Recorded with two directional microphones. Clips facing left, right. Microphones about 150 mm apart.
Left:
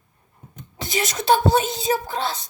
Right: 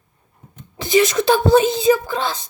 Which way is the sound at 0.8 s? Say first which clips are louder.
Right 11 dB; 90° right.